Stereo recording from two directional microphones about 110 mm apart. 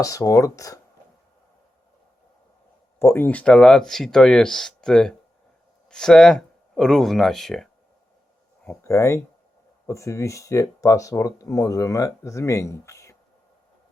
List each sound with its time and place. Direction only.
0.0 s speech: 30° left (ahead or behind)
3.0 s speech: 20° left (ahead or behind); by 7.7 s 5° left (ahead or behind)
8.8 s speech: 25° left (ahead or behind)